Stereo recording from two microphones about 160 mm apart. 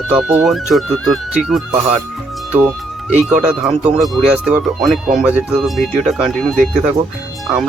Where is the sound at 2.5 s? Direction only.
10° right (ahead or behind).